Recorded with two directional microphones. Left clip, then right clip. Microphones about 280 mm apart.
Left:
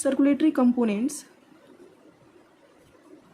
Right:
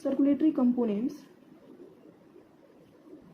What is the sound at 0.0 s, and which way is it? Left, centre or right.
A woman's voice, left.